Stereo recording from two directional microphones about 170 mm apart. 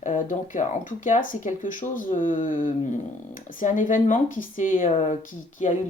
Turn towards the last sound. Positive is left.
turn(degrees=45)  # may be behind; listen again after turning